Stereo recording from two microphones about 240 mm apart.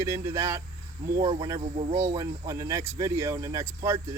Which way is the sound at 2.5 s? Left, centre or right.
Centre.